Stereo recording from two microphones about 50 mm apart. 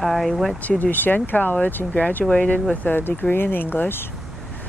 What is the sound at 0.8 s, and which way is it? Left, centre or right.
Speech, left.